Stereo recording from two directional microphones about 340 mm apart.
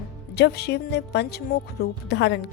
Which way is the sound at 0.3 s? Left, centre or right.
Left.